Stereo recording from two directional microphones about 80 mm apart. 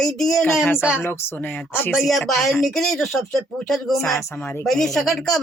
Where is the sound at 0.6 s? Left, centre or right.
Left.